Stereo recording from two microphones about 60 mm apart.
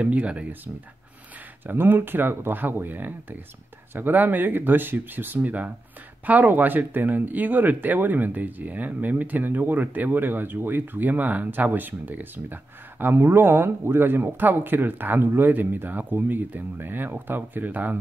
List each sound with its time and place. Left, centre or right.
0.0 s speech: right
1.7 s speech: right